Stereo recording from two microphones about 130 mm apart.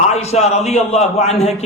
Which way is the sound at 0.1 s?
55° left (ahead or behind).